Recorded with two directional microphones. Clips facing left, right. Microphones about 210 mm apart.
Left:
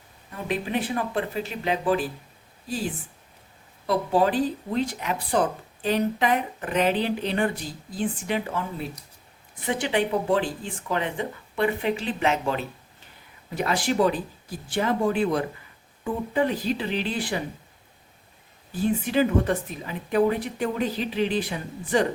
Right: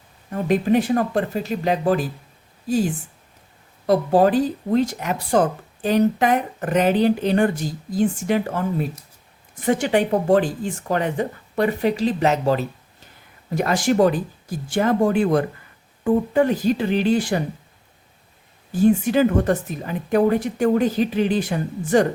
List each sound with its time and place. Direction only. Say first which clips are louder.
0.4 s speech: right 9 dB; 45° right (ahead or behind)
3.8 s speech: right 6 dB; 45° right (ahead or behind)
18.7 s speech: right 7 dB; 45° right (ahead or behind)